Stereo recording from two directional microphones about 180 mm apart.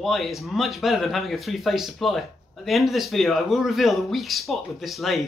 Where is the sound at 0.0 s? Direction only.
Centre (ahead or behind).